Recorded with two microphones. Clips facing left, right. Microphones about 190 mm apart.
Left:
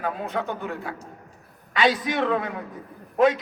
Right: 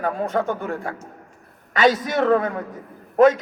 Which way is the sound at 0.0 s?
45° right (ahead or behind).